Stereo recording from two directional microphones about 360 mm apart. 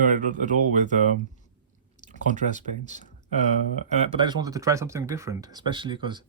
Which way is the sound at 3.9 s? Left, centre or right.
Centre.